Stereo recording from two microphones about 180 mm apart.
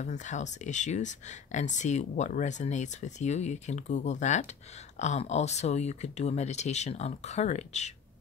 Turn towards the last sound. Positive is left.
turn(degrees=40)  # may be behind; listen again after turning